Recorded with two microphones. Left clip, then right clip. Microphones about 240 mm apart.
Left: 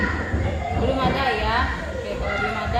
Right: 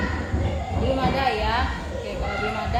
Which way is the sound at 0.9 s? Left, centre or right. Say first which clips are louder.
Right 1 dB; centre.